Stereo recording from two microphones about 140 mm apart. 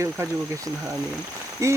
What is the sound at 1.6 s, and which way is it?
Speech, 20° right (ahead or behind).